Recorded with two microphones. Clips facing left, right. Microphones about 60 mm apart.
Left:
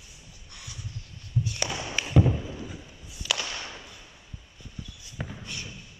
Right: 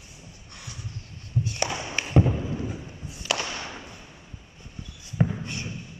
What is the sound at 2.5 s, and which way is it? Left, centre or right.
Thunder, right.